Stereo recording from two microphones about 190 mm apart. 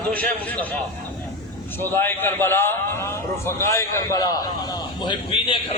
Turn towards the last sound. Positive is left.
turn(degrees=25)  # may be behind; listen again after turning